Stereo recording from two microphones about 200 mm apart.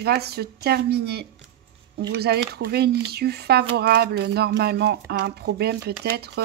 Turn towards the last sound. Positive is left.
turn(degrees=-55)  # may be behind; listen again after turning